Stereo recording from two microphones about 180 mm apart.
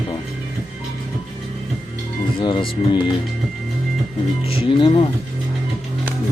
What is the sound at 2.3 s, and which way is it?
Speech, 30° left (ahead or behind).